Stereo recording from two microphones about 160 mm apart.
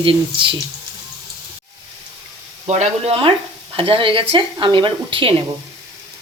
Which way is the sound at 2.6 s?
45° right (ahead or behind).